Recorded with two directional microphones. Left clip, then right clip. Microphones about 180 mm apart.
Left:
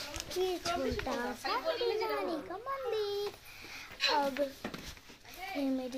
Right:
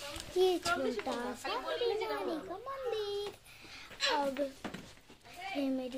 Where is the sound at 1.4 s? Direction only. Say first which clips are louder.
Left 2 dB; 10° left (ahead or behind).